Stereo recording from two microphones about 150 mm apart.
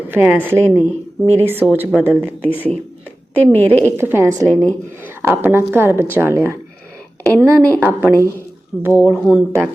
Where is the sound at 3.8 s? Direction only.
15° right (ahead or behind).